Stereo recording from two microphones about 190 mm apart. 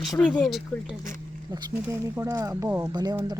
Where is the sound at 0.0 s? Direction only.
5° left (ahead or behind).